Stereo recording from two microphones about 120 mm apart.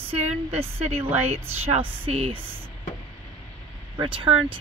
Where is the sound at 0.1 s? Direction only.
55° right (ahead or behind).